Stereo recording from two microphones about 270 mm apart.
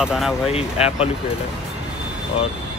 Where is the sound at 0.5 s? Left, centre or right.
Left.